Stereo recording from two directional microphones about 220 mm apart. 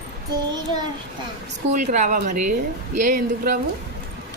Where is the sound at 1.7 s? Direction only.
35° right (ahead or behind).